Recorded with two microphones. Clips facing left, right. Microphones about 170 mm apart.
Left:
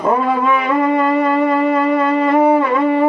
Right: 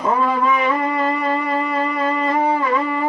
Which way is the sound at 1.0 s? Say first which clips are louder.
Left 6 dB; 60° left (ahead or behind).